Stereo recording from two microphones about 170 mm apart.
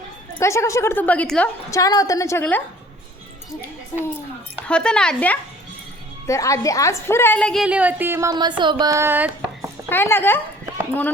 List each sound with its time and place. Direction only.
0.3 s a woman's voice: 15° left (ahead or behind)
1.7 s a woman's voice: 20° left (ahead or behind)
4.6 s a woman's voice: 5° left (ahead or behind)
6.2 s a woman's voice: 20° left (ahead or behind); by 9.6 s 10° right (ahead or behind)
9.9 s a woman's voice: 15° left (ahead or behind)